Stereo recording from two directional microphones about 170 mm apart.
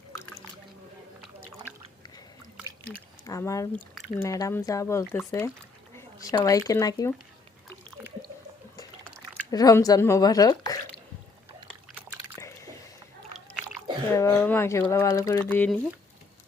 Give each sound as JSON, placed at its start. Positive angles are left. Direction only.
{"t": 3.2, "sound": "speech", "side_deg": 20}
{"t": 9.5, "sound": "speech", "side_deg": 20}
{"t": 12.4, "sound": "squish", "side_deg": 15}
{"t": 14.2, "sound": "speech", "side_deg": 15}